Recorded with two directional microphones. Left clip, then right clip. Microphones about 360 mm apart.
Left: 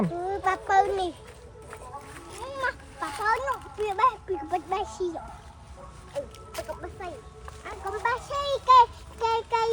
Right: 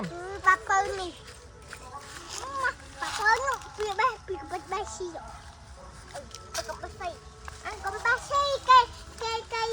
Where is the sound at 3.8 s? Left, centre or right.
Left.